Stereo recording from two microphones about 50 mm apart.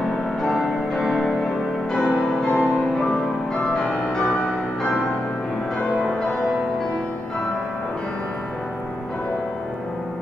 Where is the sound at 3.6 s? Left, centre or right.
Centre.